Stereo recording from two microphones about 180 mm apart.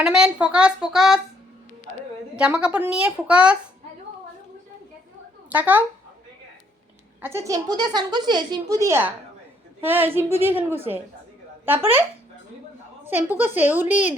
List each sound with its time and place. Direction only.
0.0 s speech: 5° right (ahead or behind)
2.3 s a woman's voice: 5° right (ahead or behind)
5.5 s speech: 10° right (ahead or behind)
7.2 s a woman's voice: 15° right (ahead or behind)
13.1 s a woman's voice: 10° right (ahead or behind)